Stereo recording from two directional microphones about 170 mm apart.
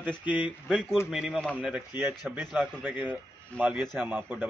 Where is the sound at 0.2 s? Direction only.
10° right (ahead or behind).